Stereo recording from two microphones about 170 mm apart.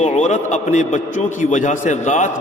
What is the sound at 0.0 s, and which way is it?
A man's voice, 40° left (ahead or behind).